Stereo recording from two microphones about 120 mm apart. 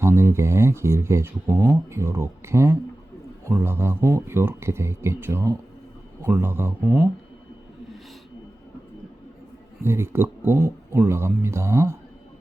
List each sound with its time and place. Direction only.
0.0 s speech: 20° right (ahead or behind)
9.8 s speech: 20° right (ahead or behind)